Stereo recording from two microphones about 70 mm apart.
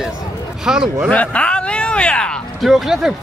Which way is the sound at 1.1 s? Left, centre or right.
Centre.